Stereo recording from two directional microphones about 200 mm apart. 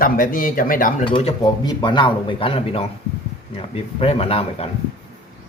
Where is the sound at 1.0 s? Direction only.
25° left (ahead or behind).